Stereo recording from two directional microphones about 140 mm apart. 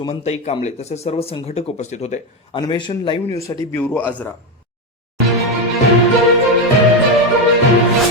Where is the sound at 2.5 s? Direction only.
30° left (ahead or behind).